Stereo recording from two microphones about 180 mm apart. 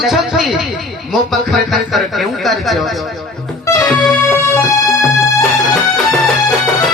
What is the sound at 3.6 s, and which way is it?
Music, 20° left (ahead or behind).